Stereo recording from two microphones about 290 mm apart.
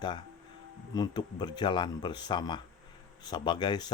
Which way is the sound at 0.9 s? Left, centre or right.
Centre.